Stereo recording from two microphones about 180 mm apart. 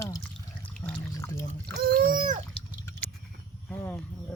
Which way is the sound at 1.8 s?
55° right (ahead or behind).